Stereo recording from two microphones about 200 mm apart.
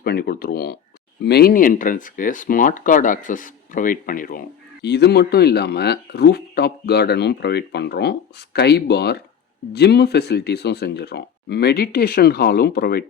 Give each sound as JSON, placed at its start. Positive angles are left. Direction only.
{"t": 0.0, "sound": "speech", "side_deg": 50}